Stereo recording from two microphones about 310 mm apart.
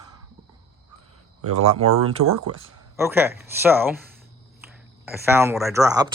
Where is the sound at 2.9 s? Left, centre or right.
Centre.